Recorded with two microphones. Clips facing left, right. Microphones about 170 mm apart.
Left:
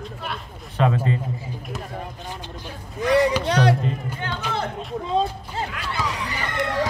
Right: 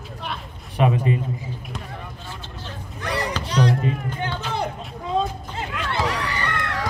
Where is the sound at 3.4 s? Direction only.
65° left (ahead or behind).